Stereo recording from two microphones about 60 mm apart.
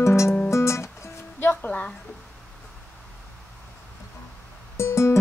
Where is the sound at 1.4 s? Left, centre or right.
Left.